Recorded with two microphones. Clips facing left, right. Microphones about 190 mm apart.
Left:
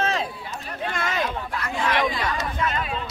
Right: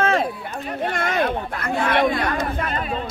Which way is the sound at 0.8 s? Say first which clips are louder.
Right 5 dB; 55° right (ahead or behind).